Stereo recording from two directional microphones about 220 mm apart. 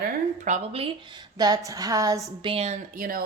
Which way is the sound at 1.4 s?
15° right (ahead or behind).